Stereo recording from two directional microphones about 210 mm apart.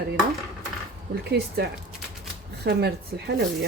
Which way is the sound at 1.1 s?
50° right (ahead or behind).